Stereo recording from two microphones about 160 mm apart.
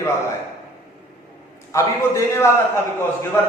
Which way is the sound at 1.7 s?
20° left (ahead or behind).